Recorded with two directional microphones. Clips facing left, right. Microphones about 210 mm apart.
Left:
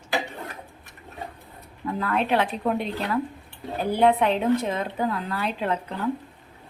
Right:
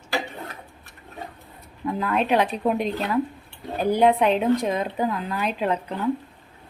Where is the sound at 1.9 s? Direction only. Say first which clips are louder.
Right 2 dB; 15° right (ahead or behind).